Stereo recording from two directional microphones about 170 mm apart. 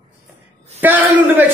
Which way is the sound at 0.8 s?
10° right (ahead or behind).